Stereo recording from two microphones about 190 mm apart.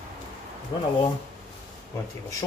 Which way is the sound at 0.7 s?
25° left (ahead or behind).